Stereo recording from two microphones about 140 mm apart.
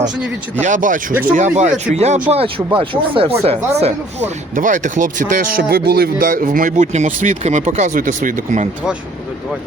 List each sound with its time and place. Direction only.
0.6 s speech: 65° right (ahead or behind)
2.7 s speech: 40° right (ahead or behind); by 8.6 s 70° right (ahead or behind)